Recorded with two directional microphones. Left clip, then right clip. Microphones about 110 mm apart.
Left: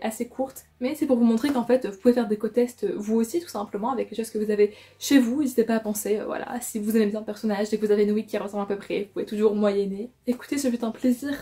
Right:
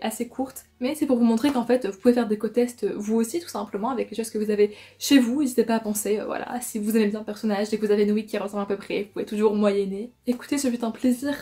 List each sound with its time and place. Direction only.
0.2 s speech: 30° right (ahead or behind)
0.8 s speech: 15° right (ahead or behind)